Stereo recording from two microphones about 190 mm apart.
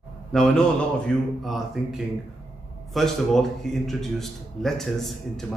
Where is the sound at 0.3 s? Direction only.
5° left (ahead or behind).